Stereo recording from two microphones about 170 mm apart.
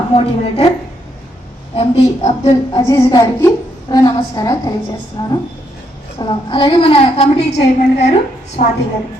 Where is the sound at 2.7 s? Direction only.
20° left (ahead or behind).